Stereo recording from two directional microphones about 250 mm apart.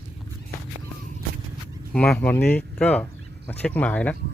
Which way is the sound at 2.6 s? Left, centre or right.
Centre.